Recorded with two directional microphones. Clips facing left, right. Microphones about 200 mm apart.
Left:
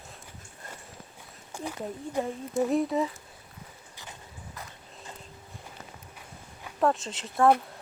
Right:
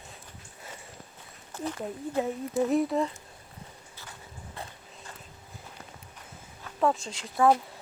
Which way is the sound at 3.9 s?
15° left (ahead or behind).